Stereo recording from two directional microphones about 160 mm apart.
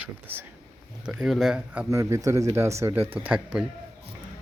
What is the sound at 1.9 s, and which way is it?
Speech, 20° right (ahead or behind).